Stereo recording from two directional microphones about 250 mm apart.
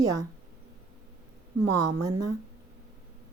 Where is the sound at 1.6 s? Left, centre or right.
Right.